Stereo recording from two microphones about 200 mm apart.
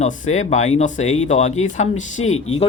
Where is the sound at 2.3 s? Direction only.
90° left.